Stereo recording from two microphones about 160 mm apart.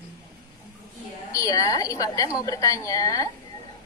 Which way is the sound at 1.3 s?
20° left (ahead or behind).